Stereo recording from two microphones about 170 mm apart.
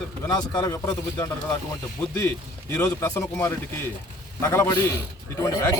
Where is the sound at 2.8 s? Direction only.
20° left (ahead or behind).